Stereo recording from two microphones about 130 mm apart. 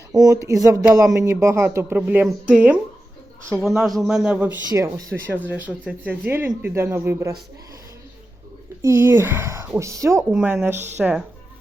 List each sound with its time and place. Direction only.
0.1 s speech: 25° right (ahead or behind); by 2.7 s 10° right (ahead or behind)
3.6 s speech: centre (ahead or behind)
4.7 s speech: 30° right (ahead or behind)
5.3 s speech: 15° right (ahead or behind)
8.8 s speech: 20° right (ahead or behind)
10.3 s speech: 10° right (ahead or behind)